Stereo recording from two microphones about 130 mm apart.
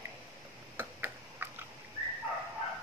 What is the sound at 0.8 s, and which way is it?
Tick-tock, 15° right (ahead or behind).